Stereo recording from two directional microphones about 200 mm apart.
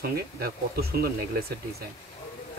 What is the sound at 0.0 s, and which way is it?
Speech, 50° right (ahead or behind).